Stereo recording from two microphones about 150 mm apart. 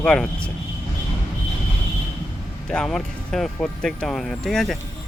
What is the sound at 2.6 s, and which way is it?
Speech, 5° left (ahead or behind).